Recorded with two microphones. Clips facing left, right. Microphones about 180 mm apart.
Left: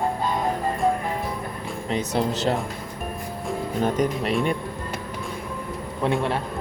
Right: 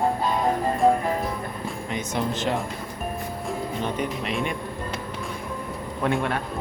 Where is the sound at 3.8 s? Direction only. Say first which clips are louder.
Left 8 dB; 40° left (ahead or behind).